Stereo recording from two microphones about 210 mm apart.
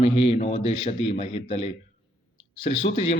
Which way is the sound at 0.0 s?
30° left (ahead or behind).